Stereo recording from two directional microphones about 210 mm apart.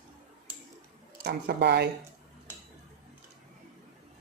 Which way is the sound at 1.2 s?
50° right (ahead or behind).